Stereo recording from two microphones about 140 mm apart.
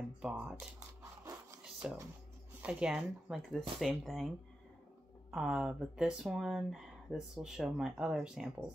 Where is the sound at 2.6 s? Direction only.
5° right (ahead or behind).